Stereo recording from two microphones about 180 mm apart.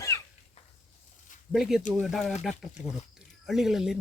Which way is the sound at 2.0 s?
Centre (ahead or behind).